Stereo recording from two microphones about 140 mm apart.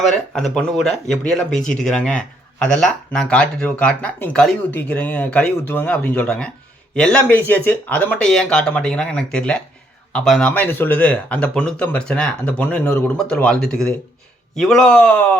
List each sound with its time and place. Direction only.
0.1 s speech: 5° left (ahead or behind)
1.5 s speech: 65° left (ahead or behind)
1.8 s a man's voice: 5° left (ahead or behind)